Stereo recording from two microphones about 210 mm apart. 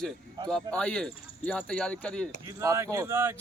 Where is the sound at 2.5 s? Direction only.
15° right (ahead or behind).